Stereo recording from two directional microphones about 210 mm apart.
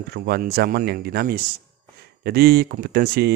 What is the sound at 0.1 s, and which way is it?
A man's voice, 50° right (ahead or behind).